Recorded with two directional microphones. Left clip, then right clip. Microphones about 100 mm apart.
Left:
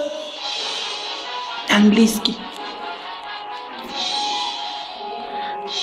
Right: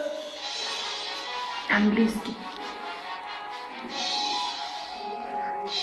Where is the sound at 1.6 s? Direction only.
20° left (ahead or behind).